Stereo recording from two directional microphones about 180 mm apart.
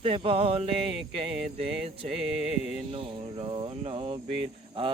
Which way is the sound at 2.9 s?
30° right (ahead or behind).